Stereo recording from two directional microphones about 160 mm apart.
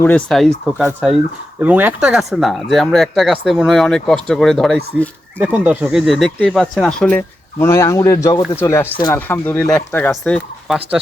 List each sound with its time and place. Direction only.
0.0 s speech: 5° left (ahead or behind)
5.4 s speech: 10° right (ahead or behind)